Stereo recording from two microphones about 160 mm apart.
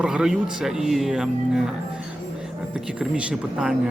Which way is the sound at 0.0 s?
5° right (ahead or behind).